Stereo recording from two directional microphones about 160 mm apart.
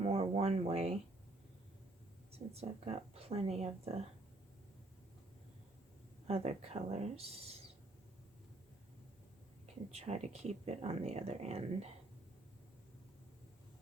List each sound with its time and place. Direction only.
0.0 s a sound: 40° right (ahead or behind)
2.5 s speech: 40° right (ahead or behind)
6.2 s speech: 40° right (ahead or behind)
9.9 s speech: 40° right (ahead or behind)